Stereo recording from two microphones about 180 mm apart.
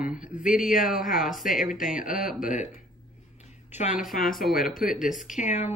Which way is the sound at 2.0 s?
50° left (ahead or behind).